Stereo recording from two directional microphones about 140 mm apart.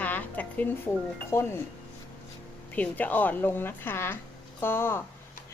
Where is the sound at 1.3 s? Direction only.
20° left (ahead or behind).